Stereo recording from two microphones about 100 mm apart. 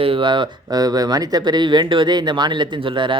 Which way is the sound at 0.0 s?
65° right (ahead or behind).